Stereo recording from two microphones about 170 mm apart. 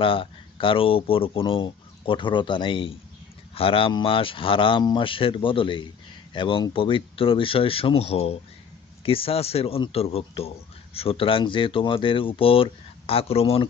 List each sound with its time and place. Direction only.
0.0 s speech: 30° left (ahead or behind)